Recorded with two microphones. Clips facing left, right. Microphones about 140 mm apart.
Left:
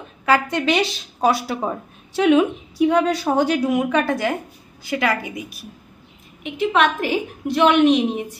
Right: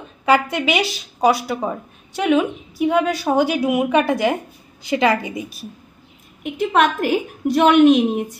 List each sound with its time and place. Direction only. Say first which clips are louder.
0.2 s a woman's voice: right 2 dB; 15° right (ahead or behind)
0.6 s a woman's voice: left 1 dB; 5° right (ahead or behind); by 5.7 s 25° right (ahead or behind)
6.4 s a woman's voice: right 1 dB; 45° right (ahead or behind)